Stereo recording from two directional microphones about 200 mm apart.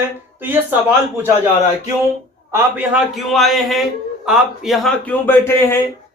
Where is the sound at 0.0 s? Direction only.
10° right (ahead or behind).